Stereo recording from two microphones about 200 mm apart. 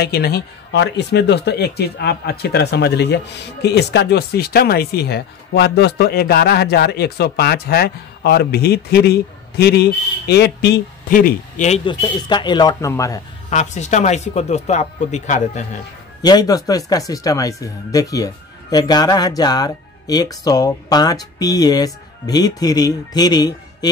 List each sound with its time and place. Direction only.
0.0 s speech: 50° left (ahead or behind)
11.8 s speech: 25° left (ahead or behind)
13.5 s speech: 35° left (ahead or behind)
16.2 s speech: 20° left (ahead or behind)